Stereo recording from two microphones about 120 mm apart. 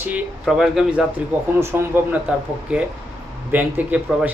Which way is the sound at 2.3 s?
10° right (ahead or behind).